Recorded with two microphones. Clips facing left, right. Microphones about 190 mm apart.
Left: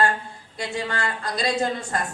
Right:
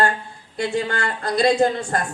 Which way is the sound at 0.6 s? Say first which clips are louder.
Right 5 dB; 55° right (ahead or behind).